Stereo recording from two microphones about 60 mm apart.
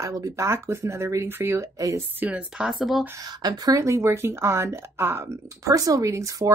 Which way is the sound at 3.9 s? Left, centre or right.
Right.